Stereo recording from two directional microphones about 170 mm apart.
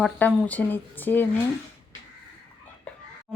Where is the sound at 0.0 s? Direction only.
5° left (ahead or behind).